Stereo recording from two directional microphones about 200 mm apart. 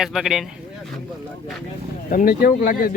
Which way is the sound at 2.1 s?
50° left (ahead or behind).